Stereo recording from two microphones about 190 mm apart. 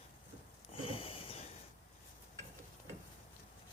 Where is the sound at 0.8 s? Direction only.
30° left (ahead or behind).